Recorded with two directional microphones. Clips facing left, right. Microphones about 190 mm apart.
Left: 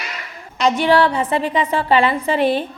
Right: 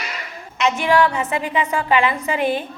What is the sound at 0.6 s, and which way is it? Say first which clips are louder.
A woman's voice: left 2 dB; 35° left (ahead or behind).